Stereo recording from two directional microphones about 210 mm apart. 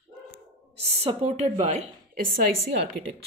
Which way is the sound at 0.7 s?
30° right (ahead or behind).